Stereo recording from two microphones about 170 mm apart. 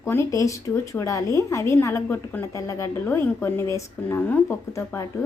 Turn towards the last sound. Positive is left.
turn(degrees=15)  # may be behind; listen again after turning